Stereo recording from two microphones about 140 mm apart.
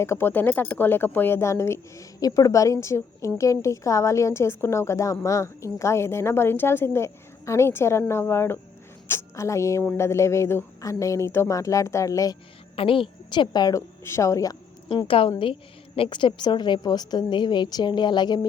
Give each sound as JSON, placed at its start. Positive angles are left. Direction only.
{"t": 0.0, "sound": "a woman's voice", "side_deg": 15}
{"t": 12.7, "sound": "speech", "side_deg": 40}
{"t": 14.8, "sound": "a woman's voice", "side_deg": 40}